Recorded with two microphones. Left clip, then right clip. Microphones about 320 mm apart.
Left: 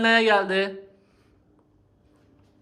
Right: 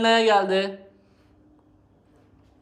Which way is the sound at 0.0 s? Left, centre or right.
Centre.